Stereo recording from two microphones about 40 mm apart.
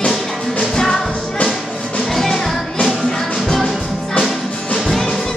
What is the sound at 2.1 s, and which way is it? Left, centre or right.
Music, centre.